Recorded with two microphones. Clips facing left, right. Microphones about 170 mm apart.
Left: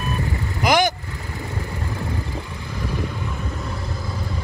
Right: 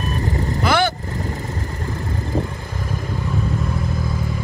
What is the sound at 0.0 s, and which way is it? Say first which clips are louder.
Vehicle: right 3 dB; 40° right (ahead or behind).